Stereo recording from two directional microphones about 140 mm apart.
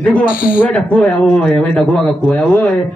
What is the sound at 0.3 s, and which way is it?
Speech, 90° left.